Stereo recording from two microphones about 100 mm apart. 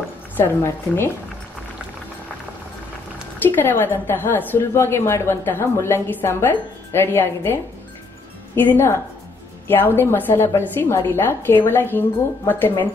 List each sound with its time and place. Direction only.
0.4 s a woman's voice: 25° left (ahead or behind)
3.4 s a woman's voice: 20° left (ahead or behind)
8.5 s a woman's voice: 25° left (ahead or behind)